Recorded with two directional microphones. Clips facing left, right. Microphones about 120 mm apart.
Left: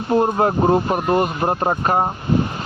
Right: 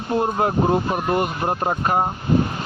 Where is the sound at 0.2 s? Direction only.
45° left (ahead or behind).